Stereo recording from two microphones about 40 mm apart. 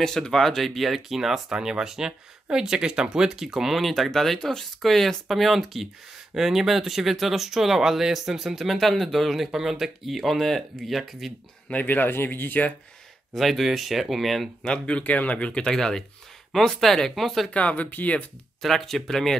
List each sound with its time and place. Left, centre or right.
0.0 s speech: centre
3.8 s speech: centre
8.7 s speech: centre
11.7 s speech: left
13.3 s speech: centre
14.9 s speech: left
15.6 s speech: centre
17.5 s speech: left
17.8 s speech: left
18.6 s speech: centre